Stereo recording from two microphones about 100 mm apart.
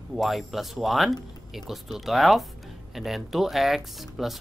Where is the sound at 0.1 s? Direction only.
Centre (ahead or behind).